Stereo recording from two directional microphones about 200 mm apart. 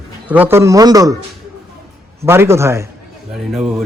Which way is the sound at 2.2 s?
10° right (ahead or behind).